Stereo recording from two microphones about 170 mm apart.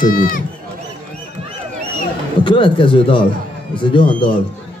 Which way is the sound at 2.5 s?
30° left (ahead or behind).